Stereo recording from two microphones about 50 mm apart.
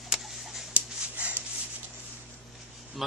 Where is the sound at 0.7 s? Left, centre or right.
Right.